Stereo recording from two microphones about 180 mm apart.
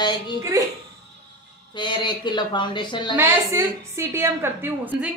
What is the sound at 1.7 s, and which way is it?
Speech, 25° left (ahead or behind).